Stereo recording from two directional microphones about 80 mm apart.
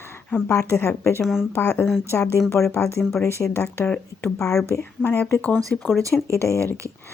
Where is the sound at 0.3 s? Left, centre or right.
Left.